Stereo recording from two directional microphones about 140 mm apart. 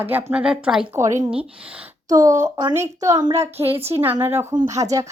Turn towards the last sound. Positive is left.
turn(degrees=-25)  # may be behind; listen again after turning